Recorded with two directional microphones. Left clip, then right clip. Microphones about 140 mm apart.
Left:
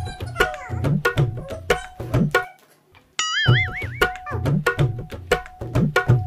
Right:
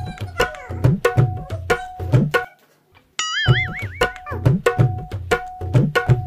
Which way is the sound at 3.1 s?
Centre (ahead or behind).